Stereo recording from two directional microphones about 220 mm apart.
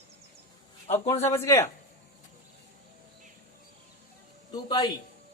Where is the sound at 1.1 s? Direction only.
30° left (ahead or behind).